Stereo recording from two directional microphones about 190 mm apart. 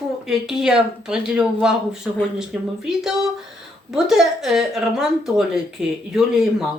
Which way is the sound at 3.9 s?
Centre (ahead or behind).